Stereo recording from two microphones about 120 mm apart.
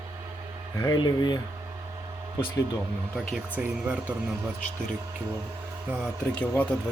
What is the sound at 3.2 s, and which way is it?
Speech, 10° right (ahead or behind).